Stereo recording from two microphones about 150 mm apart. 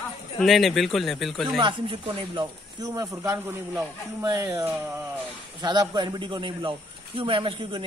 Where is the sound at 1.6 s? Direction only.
30° right (ahead or behind).